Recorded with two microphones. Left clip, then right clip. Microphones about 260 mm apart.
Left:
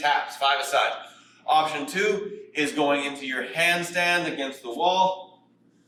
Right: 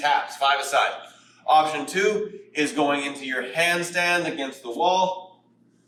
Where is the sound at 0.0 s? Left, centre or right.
Centre.